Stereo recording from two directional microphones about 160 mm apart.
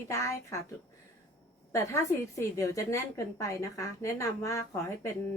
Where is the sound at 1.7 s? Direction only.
15° left (ahead or behind).